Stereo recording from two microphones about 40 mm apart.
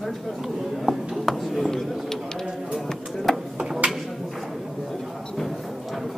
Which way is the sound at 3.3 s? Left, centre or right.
Centre.